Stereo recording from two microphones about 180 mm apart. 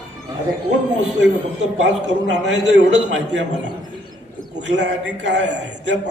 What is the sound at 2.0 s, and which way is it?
Speech, 75° right (ahead or behind).